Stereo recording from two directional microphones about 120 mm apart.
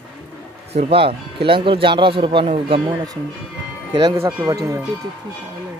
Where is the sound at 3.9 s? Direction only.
35° right (ahead or behind).